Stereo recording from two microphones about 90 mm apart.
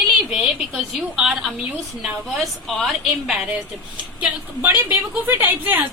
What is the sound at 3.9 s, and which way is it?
A man's voice, 15° right (ahead or behind).